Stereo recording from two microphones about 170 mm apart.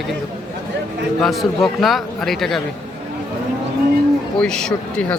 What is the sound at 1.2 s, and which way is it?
Speech, centre (ahead or behind).